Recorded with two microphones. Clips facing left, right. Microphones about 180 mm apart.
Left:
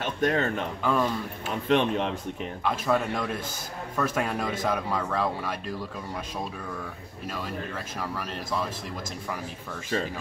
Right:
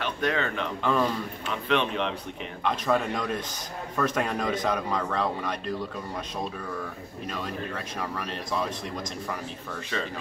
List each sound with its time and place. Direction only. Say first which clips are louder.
0.0 s speech: left 2 dB; 45° left (ahead or behind)
0.8 s speech: even; 5° left (ahead or behind)
1.5 s speech: left 3 dB; 45° left (ahead or behind)
2.6 s speech: even; 5° left (ahead or behind)
7.2 s speech: even; 5° left (ahead or behind)